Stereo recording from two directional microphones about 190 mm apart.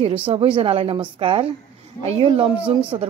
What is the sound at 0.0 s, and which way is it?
A woman's voice, 30° right (ahead or behind).